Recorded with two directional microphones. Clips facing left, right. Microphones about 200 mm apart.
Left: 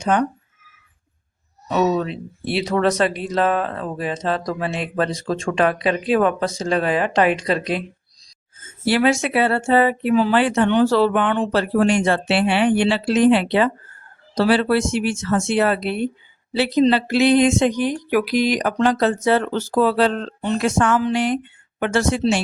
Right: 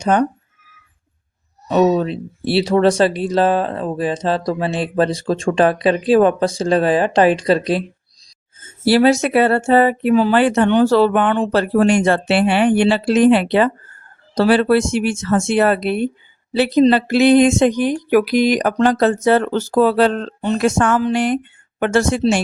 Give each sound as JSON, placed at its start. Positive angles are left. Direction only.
{"t": 0.0, "sound": "speech", "side_deg": -40}
{"t": 1.6, "sound": "speech", "side_deg": -35}